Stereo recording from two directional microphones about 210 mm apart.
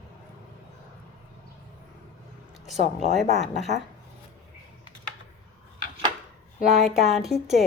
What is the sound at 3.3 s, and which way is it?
Speech, 30° right (ahead or behind).